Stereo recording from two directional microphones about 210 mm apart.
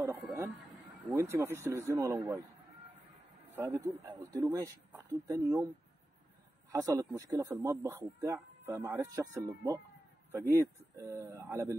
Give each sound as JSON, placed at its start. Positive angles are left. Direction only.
{"t": 0.0, "sound": "speech", "side_deg": -10}
{"t": 3.5, "sound": "speech", "side_deg": -10}
{"t": 6.7, "sound": "speech", "side_deg": -15}